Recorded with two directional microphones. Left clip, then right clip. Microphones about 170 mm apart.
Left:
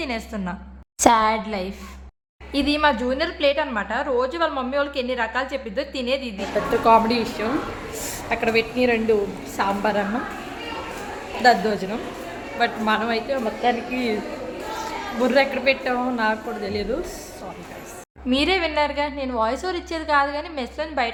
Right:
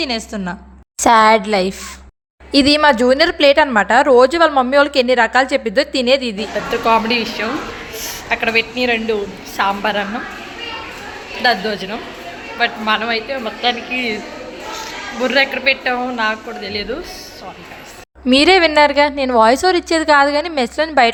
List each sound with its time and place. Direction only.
0.0 s a woman's voice: 25° right (ahead or behind)
1.1 s speech: 50° right (ahead or behind)
6.3 s a woman's voice: 5° left (ahead or behind)
11.4 s a woman's voice: 10° left (ahead or behind)
15.2 s a woman's voice: 5° left (ahead or behind)
18.3 s speech: 45° right (ahead or behind)